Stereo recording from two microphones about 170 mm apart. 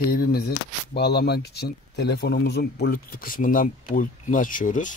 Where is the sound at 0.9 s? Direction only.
75° left (ahead or behind); by 5.0 s 50° left (ahead or behind).